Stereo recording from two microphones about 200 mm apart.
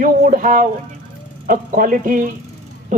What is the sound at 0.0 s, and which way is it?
A man's voice, 40° right (ahead or behind).